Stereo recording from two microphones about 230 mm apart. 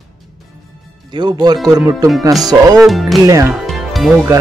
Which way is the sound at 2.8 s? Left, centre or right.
Centre.